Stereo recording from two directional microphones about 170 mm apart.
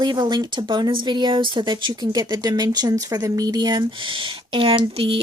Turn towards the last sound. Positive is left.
turn(degrees=-30)  # may be behind; listen again after turning